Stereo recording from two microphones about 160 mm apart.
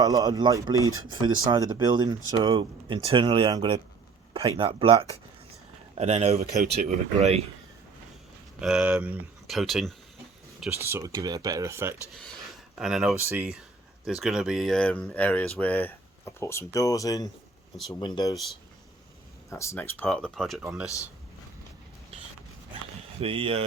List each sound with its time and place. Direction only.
0.0 s speech: 20° right (ahead or behind); by 7.4 s 45° right (ahead or behind)
8.5 s speech: 5° right (ahead or behind)
10.7 s speech: 15° right (ahead or behind)
12.1 s a sound: centre (ahead or behind)
13.1 s speech: 15° right (ahead or behind); by 18.3 s 25° left (ahead or behind)
19.5 s speech: 20° left (ahead or behind); by 20.9 s 5° right (ahead or behind)
23.2 s speech: 35° right (ahead or behind)